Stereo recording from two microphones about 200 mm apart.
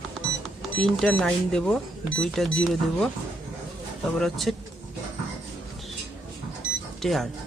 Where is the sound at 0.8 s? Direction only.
5° left (ahead or behind).